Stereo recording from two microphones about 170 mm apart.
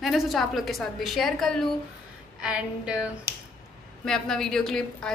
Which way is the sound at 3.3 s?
15° right (ahead or behind).